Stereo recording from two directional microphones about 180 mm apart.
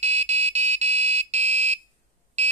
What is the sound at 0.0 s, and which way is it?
Alarm, 35° right (ahead or behind).